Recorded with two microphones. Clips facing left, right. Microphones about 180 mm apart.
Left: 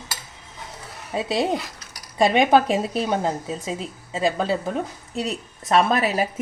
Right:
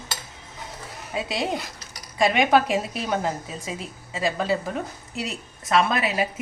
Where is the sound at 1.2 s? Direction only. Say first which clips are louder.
Left 6 dB; 30° left (ahead or behind).